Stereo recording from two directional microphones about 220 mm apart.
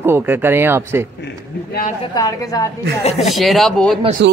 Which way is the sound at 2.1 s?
15° left (ahead or behind).